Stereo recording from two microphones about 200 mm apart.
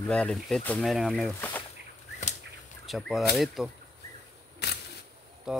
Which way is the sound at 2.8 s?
Centre (ahead or behind).